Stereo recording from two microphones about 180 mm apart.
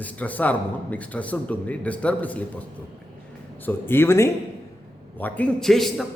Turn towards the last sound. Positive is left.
turn(degrees=0)  # may be behind; listen again after turning